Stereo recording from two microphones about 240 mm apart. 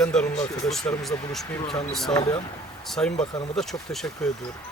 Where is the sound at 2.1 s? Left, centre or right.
Centre.